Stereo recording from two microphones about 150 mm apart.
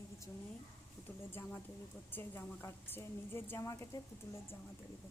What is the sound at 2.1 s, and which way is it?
A woman's voice, 15° left (ahead or behind).